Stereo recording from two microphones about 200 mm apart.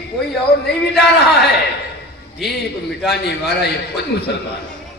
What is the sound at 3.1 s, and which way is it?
A man's voice, 55° left (ahead or behind).